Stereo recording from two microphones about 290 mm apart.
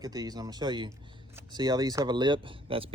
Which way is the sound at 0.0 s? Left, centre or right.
Centre.